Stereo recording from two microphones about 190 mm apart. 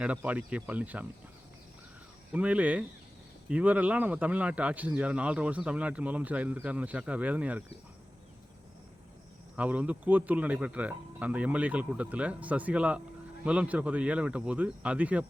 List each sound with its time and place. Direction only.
0.0 s speech: 5° right (ahead or behind)
2.3 s speech: 5° right (ahead or behind)
9.6 s speech: 5° right (ahead or behind)